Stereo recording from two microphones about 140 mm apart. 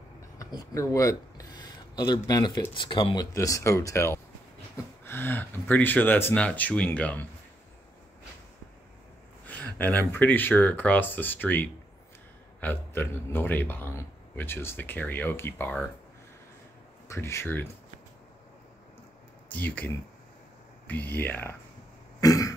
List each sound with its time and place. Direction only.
0.4 s speech: 25° left (ahead or behind)
3.3 s speech: 20° left (ahead or behind)
9.5 s speech: 10° left (ahead or behind)
17.1 s speech: 20° left (ahead or behind)
19.5 s speech: 10° left (ahead or behind)
22.2 s cough: 25° left (ahead or behind)